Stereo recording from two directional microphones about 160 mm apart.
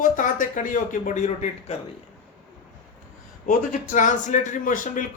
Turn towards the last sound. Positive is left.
turn(degrees=55)  # may be behind; listen again after turning